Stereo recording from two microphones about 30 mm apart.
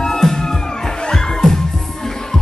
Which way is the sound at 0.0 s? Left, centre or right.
Centre.